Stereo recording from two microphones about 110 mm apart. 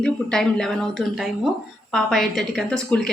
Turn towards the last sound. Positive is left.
turn(degrees=5)  # may be behind; listen again after turning